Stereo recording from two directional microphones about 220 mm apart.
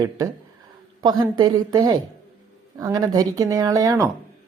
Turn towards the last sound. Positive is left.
turn(degrees=-10)  # may be behind; listen again after turning